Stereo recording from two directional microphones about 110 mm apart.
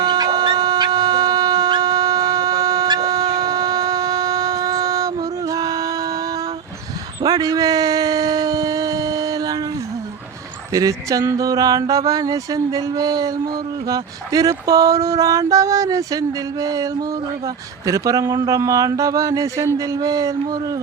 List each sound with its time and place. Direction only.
0.0 s dog: 40° right (ahead or behind)
7.3 s a sound: 35° right (ahead or behind)
10.7 s mantra: 30° right (ahead or behind)